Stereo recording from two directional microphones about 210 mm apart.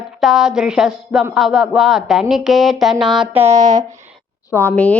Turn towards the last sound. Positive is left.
turn(degrees=5)  # may be behind; listen again after turning